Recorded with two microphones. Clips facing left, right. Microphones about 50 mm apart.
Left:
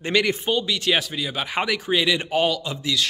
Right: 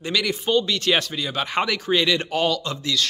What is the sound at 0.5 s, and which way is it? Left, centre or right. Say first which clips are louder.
Speech: right 4 dB; centre.